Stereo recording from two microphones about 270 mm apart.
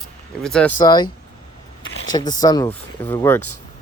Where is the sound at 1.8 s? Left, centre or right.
Left.